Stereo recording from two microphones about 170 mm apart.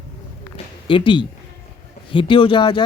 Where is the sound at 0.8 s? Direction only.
30° left (ahead or behind).